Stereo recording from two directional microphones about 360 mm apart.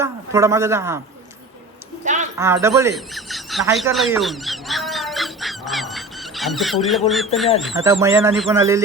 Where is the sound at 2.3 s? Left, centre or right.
Centre.